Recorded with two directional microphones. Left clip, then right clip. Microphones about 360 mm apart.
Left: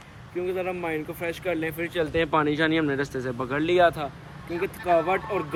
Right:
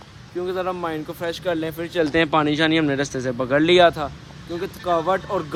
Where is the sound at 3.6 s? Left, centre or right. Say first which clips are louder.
Right 5 dB; right.